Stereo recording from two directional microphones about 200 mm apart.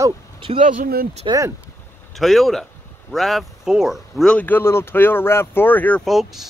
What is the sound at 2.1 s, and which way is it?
Speech, centre (ahead or behind).